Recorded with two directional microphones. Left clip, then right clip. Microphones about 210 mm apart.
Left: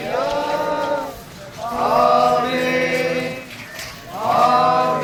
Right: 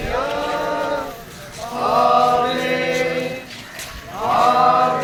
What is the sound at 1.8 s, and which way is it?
Chant, 5° left (ahead or behind).